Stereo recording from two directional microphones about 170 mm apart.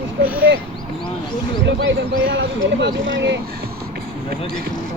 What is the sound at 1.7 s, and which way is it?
Speech, 80° right.